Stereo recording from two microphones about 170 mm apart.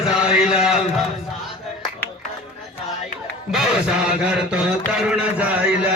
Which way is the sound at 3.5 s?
5° right (ahead or behind).